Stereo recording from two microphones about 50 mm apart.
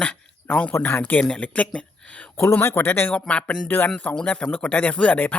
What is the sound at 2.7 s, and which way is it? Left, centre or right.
Speech, left.